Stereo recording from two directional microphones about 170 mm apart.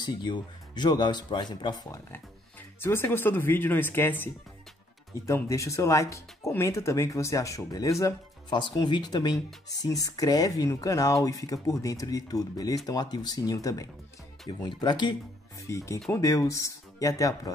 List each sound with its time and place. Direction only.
0.0 s speech: 25° left (ahead or behind)
2.8 s speech: 15° left (ahead or behind)